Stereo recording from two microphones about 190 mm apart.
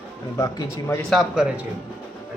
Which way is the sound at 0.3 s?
15° left (ahead or behind).